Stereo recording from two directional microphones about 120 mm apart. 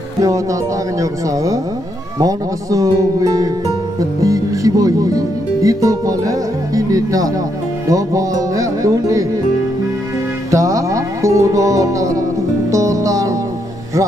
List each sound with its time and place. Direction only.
0.2 s speech: 25° right (ahead or behind)
2.1 s speech: 30° right (ahead or behind)
10.5 s music: 30° right (ahead or behind)